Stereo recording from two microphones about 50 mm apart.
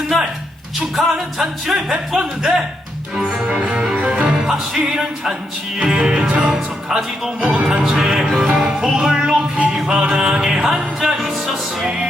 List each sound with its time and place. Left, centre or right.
0.9 s music: centre
3.5 s music: right
6.5 s music: centre